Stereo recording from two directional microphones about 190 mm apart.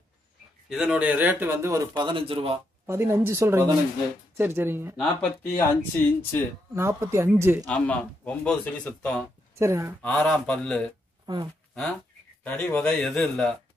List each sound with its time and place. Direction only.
0.7 s speech: 5° right (ahead or behind); by 2.6 s 30° right (ahead or behind)
2.9 s speech: 15° right (ahead or behind)
4.9 s speech: 5° left (ahead or behind)
6.7 s speech: 15° right (ahead or behind)
7.6 s speech: 5° left (ahead or behind)
9.6 s speech: 15° right (ahead or behind)
10.0 s a man's voice: 5° left (ahead or behind)
11.2 s speech: 25° right (ahead or behind)
12.4 s a man's voice: 10° left (ahead or behind)